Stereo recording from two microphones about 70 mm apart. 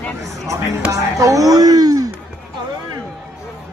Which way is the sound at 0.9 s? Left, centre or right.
Right.